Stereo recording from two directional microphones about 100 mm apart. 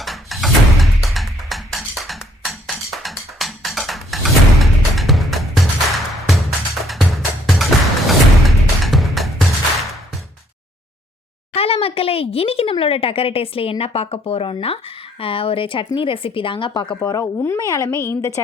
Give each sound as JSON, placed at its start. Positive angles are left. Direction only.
{"t": 0.0, "sound": "music", "side_deg": 0}
{"t": 7.4, "sound": "music", "side_deg": 0}
{"t": 11.5, "sound": "speech", "side_deg": 80}
{"t": 17.0, "sound": "speech", "side_deg": 35}